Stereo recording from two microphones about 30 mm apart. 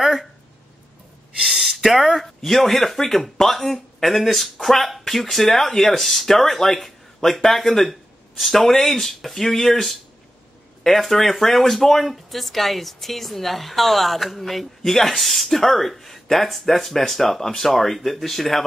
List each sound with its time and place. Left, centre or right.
0.0 s speech: centre
1.5 s a sound: centre
2.4 s speech: centre